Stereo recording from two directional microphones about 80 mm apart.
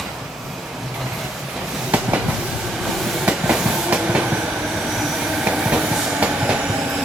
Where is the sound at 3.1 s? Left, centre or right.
Centre.